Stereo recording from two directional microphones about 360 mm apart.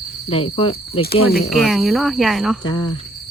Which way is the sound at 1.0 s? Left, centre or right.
Left.